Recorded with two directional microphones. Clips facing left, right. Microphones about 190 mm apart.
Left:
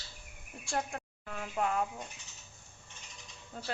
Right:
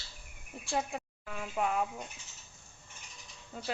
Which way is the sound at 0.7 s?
5° right (ahead or behind).